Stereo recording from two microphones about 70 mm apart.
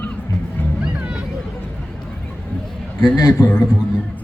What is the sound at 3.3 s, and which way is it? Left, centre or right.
Speech, left.